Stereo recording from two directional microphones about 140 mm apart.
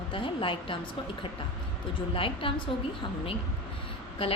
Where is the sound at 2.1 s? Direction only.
40° left (ahead or behind).